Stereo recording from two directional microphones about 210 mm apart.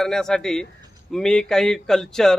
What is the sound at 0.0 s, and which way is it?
Speech, centre (ahead or behind).